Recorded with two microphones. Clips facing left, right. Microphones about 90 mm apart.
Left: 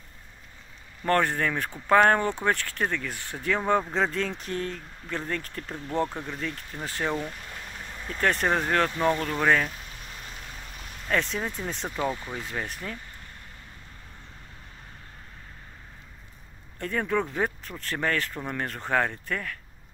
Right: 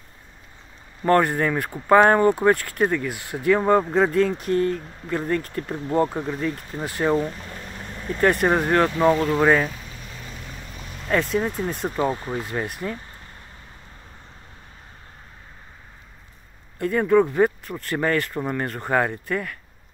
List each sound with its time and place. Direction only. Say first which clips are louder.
1.0 s speech: right 5 dB; 10° right (ahead or behind)
8.2 s speech: right 6 dB; 10° right (ahead or behind)
11.1 s speech: right 6 dB; 5° right (ahead or behind)
11.9 s speech: right 6 dB; 30° right (ahead or behind)
12.4 s speech: right 6 dB; 10° right (ahead or behind)
16.7 s speech: right 9 dB; 5° right (ahead or behind)